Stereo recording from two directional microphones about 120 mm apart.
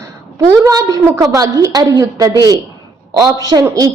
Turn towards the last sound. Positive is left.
turn(degrees=-30)  # may be behind; listen again after turning